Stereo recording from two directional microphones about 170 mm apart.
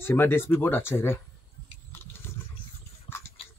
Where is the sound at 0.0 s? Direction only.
15° left (ahead or behind).